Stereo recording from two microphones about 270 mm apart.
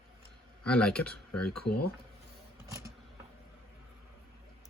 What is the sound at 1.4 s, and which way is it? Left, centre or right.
Speech, left.